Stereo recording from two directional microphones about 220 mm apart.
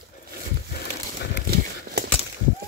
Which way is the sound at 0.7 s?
50° left (ahead or behind).